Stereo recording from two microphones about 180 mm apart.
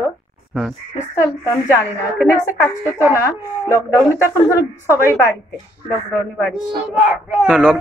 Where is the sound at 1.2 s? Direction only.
15° left (ahead or behind).